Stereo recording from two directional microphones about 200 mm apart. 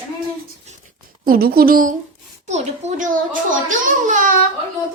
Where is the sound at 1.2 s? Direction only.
50° right (ahead or behind).